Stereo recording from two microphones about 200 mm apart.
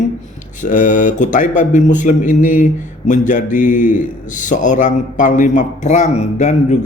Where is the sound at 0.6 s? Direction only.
40° left (ahead or behind).